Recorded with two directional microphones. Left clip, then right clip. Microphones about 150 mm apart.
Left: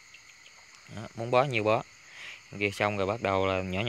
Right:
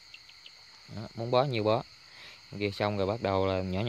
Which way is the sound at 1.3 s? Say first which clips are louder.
Left 2 dB; 15° right (ahead or behind).